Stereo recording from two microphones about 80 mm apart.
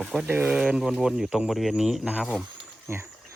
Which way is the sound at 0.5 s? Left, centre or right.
Centre.